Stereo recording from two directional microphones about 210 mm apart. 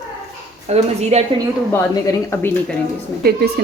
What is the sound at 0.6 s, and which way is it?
Speech, 30° right (ahead or behind).